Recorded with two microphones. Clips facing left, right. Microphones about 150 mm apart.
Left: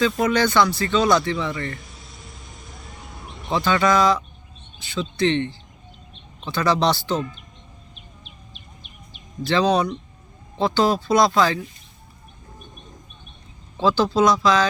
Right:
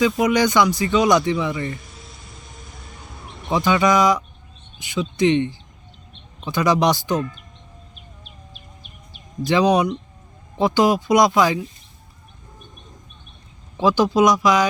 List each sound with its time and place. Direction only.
0.2 s speech: 15° right (ahead or behind)
1.7 s a sound: centre (ahead or behind)
3.5 s speech: 15° right (ahead or behind)
9.5 s speech: 15° right (ahead or behind)
13.7 s speech: 15° right (ahead or behind)